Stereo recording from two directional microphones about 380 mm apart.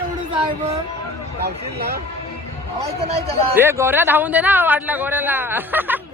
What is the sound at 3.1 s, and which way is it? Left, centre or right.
A man's voice, centre.